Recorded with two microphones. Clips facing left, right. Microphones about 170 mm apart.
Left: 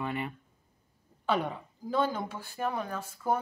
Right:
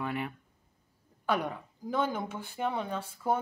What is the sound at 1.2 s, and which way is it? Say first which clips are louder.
Speech: left 1 dB; 10° right (ahead or behind).